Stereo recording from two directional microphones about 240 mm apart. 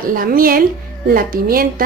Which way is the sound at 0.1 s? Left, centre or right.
Right.